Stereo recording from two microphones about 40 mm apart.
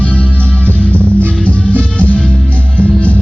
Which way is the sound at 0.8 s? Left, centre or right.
Left.